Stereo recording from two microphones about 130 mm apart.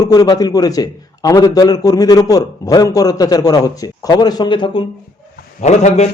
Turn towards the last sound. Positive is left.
turn(degrees=60)  # may be behind; listen again after turning